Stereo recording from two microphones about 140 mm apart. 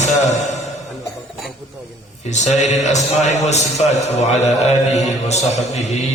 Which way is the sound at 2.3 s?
55° left (ahead or behind).